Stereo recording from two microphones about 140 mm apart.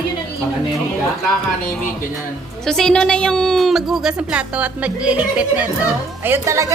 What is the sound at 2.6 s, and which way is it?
A woman's voice, 5° left (ahead or behind).